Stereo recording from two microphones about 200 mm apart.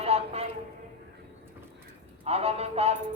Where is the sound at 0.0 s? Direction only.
30° right (ahead or behind).